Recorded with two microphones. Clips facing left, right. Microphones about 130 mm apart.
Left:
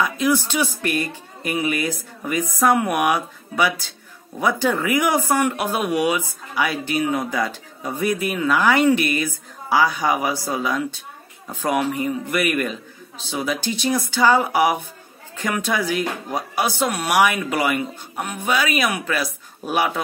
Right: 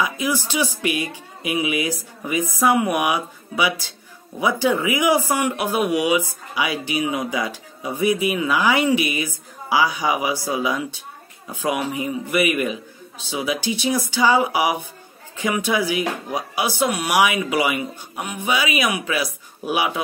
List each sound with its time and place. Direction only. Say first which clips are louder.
0.0 s music: left 3 dB; 5° right (ahead or behind)
0.4 s speech: even; 50° left (ahead or behind)
1.0 s speech: even; 5° right (ahead or behind)
6.7 s speech: left 1 dB; 50° left (ahead or behind)
7.0 s speech: left 2 dB; 10° right (ahead or behind)